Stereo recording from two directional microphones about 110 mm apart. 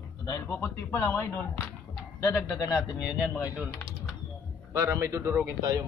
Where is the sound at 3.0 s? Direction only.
5° right (ahead or behind).